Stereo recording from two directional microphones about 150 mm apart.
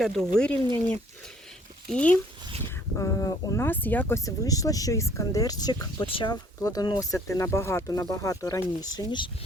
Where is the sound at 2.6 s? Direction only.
20° left (ahead or behind).